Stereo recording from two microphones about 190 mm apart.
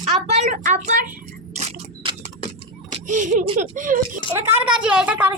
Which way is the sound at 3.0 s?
40° right (ahead or behind).